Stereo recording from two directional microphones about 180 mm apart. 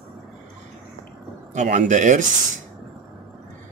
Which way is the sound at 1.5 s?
40° right (ahead or behind).